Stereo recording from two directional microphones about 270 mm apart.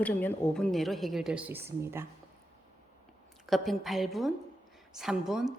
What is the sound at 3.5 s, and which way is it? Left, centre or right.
A woman's voice, centre.